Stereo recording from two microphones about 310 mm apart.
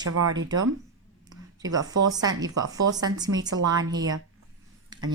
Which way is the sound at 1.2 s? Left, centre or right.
Centre.